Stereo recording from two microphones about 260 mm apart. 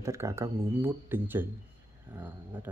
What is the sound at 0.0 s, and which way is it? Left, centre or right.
Speech, centre.